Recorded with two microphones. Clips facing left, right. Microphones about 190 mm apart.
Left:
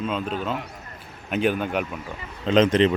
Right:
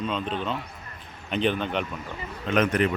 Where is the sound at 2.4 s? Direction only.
25° left (ahead or behind).